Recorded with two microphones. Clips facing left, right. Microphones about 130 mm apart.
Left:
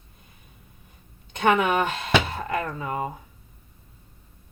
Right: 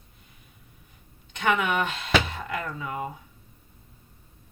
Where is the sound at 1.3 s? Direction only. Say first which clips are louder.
Left 4 dB; 45° left (ahead or behind).